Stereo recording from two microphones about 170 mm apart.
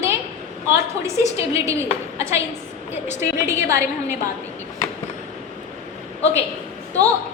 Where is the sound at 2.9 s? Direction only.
15° right (ahead or behind).